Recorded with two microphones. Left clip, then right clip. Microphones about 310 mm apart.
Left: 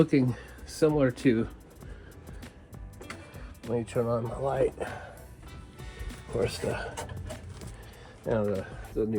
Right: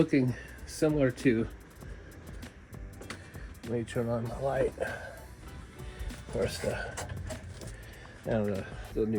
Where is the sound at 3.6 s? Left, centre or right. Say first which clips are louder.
Left 4 dB; centre.